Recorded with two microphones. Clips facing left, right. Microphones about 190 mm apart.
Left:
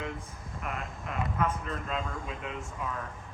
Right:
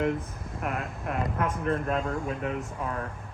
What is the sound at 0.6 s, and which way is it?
Speech, 60° right (ahead or behind).